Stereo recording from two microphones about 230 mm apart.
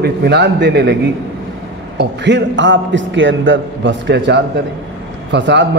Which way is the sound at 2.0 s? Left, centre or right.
Right.